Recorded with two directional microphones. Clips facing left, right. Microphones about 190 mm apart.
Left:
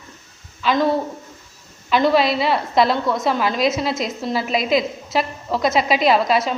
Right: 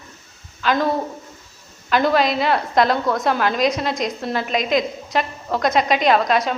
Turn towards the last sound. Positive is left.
turn(degrees=5)  # may be behind; listen again after turning